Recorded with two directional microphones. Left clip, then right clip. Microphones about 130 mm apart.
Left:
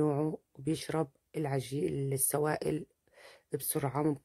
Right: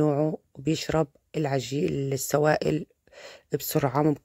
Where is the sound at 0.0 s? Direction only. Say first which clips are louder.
Right 7 dB; 30° right (ahead or behind).